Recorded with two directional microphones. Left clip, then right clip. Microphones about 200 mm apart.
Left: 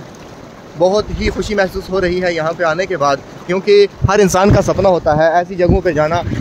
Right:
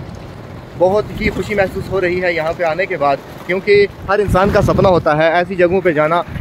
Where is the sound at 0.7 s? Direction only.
5° left (ahead or behind); by 3.9 s 20° left (ahead or behind).